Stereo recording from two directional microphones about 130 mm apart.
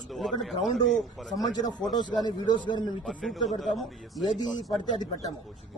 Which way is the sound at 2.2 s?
35° left (ahead or behind).